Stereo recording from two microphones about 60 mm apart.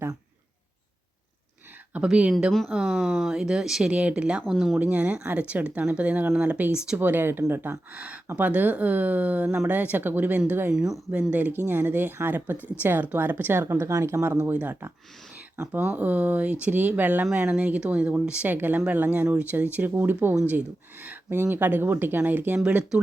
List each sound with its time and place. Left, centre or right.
1.9 s speech: centre
2.7 s speech: centre
3.9 s speech: centre
4.5 s speech: centre
4.8 s speech: right
6.9 s speech: right
7.9 s speech: right
10.7 s speech: centre
11.1 s speech: right
12.5 s speech: left
12.8 s speech: right
14.5 s speech: right
18.4 s speech: right